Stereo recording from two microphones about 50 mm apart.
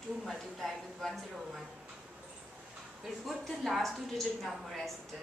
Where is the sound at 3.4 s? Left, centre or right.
Centre.